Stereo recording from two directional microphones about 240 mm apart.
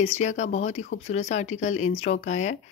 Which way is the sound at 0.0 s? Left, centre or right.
Left.